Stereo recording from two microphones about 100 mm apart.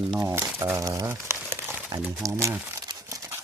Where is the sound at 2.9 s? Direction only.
35° right (ahead or behind).